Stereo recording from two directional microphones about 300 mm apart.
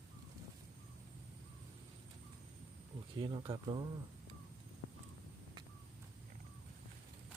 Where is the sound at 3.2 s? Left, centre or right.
Centre.